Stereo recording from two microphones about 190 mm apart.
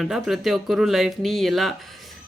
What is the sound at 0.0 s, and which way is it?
Speech, centre (ahead or behind).